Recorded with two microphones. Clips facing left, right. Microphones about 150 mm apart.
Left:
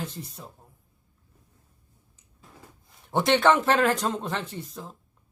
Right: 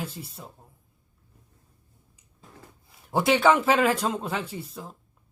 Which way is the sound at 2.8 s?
5° right (ahead or behind).